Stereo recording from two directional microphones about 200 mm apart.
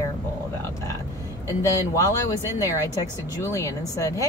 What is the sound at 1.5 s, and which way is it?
Speech, 15° left (ahead or behind).